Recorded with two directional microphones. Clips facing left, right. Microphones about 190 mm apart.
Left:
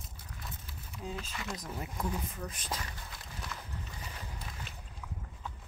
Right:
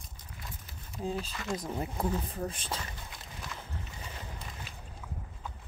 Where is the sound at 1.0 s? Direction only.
35° right (ahead or behind).